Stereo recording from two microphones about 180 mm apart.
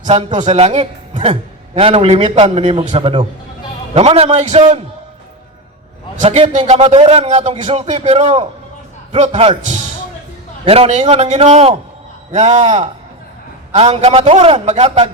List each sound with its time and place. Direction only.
0.0 s a man's voice: 40° right (ahead or behind)
6.2 s a man's voice: 30° right (ahead or behind)